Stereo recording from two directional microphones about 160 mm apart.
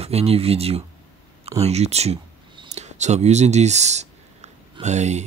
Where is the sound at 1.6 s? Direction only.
40° right (ahead or behind).